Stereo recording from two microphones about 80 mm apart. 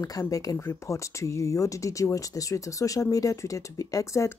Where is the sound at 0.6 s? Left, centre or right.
Left.